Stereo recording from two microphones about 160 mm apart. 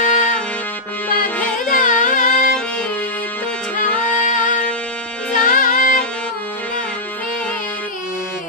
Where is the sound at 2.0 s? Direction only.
55° left (ahead or behind).